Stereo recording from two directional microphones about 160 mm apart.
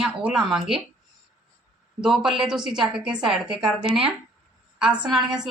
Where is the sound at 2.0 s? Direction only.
5° right (ahead or behind).